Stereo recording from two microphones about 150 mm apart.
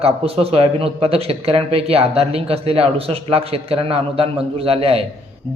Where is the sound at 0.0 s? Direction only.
40° right (ahead or behind).